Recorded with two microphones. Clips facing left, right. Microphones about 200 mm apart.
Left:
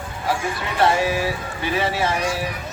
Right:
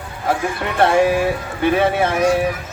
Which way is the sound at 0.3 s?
55° right (ahead or behind).